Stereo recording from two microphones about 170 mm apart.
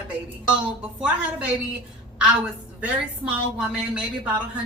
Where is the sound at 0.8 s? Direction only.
5° right (ahead or behind).